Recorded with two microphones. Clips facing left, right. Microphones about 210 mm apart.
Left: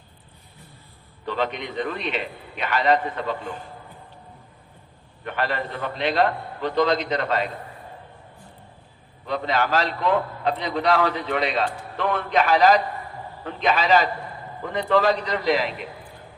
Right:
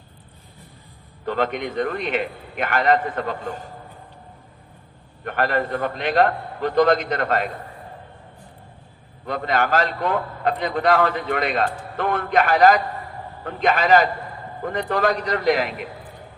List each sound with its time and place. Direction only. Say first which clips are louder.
1.2 s a man's voice: right 3 dB; 50° right (ahead or behind)
5.2 s a man's voice: right 4 dB; 50° right (ahead or behind)
9.2 s a man's voice: right 1 dB; 50° right (ahead or behind)